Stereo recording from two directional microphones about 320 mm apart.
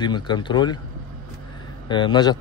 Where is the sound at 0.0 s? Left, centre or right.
Centre.